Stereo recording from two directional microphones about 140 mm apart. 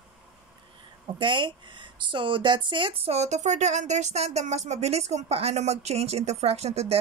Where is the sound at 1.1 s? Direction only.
35° right (ahead or behind).